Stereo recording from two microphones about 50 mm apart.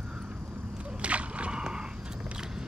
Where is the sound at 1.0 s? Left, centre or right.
Right.